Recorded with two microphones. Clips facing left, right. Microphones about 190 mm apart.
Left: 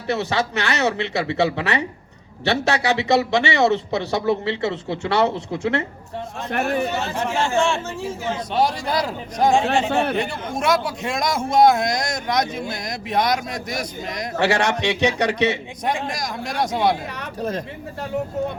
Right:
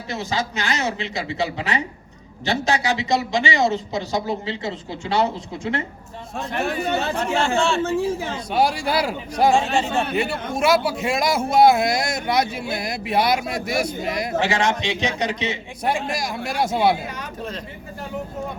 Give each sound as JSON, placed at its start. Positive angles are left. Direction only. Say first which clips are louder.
{"t": 0.1, "sound": "speech", "louder": "left 4 dB", "side_deg": 65}
{"t": 6.5, "sound": "speech", "louder": "left 3 dB", "side_deg": 55}
{"t": 7.2, "sound": "speech", "louder": "left 3 dB", "side_deg": 15}
{"t": 8.5, "sound": "a man's voice", "louder": "right 2 dB", "side_deg": -10}
{"t": 9.9, "sound": "speech", "louder": "left 3 dB", "side_deg": 60}
{"t": 10.2, "sound": "a man's voice", "louder": "right 2 dB", "side_deg": -5}
{"t": 14.3, "sound": "speech", "louder": "left 3 dB", "side_deg": 65}
{"t": 16.0, "sound": "a man's voice", "louder": "right 1 dB", "side_deg": -5}